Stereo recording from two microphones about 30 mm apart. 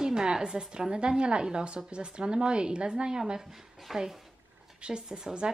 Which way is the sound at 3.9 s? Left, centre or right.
Centre.